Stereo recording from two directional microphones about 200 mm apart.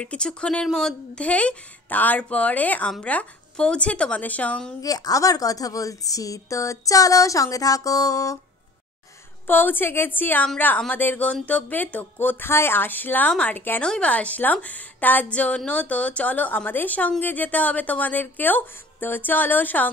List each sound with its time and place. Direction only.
0.0 s speech: 5° left (ahead or behind)
4.8 s a woman's voice: 20° left (ahead or behind)
9.5 s a woman's voice: 10° left (ahead or behind)